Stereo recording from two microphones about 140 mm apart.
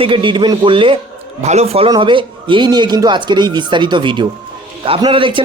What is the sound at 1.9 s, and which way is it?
Speech, 35° right (ahead or behind).